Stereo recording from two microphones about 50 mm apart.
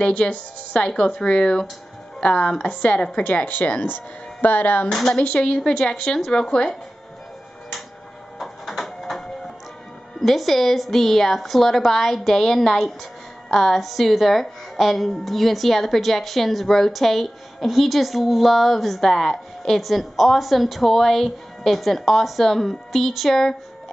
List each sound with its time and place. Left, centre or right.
0.0 s a woman's voice: left
3.8 s speech: left
4.8 s a woman's voice: centre
5.1 s a woman's voice: left
8.4 s printer: centre
10.2 s a woman's voice: centre